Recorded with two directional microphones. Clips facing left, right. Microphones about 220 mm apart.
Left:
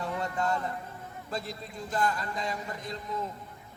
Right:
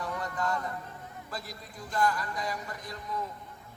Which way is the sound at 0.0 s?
25° left (ahead or behind).